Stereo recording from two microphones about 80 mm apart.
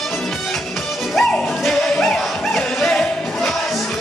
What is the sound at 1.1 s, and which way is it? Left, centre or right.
Music, centre.